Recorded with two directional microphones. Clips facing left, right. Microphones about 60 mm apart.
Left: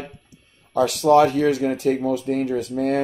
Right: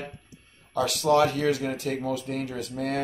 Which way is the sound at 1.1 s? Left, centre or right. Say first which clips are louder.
Left 6 dB; left.